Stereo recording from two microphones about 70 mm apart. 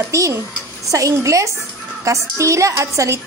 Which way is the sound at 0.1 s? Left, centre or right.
Right.